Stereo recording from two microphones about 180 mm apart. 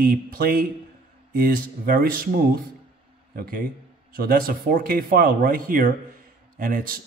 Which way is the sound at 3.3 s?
55° right (ahead or behind).